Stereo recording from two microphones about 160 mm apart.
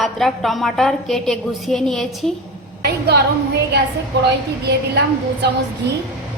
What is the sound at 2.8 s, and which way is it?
Speech, 90° right.